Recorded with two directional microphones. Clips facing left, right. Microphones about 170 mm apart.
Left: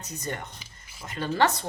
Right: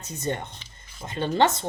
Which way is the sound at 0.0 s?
25° right (ahead or behind).